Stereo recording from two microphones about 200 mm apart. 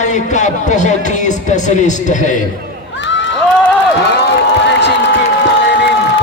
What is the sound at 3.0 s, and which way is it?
Crowd, 65° left (ahead or behind).